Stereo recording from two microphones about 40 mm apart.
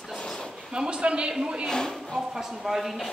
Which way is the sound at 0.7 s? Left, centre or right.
Right.